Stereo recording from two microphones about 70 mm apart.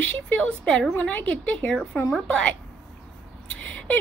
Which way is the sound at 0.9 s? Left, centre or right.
Left.